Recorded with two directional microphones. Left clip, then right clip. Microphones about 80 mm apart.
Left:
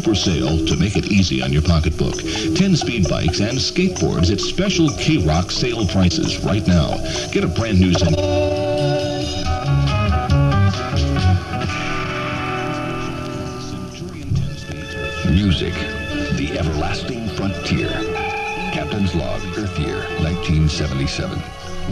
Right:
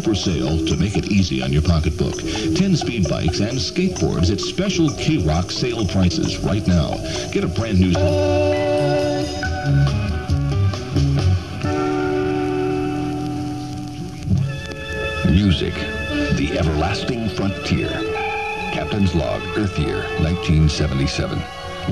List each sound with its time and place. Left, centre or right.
0.0 s speech: right
15.2 s music: right
17.4 s speech: right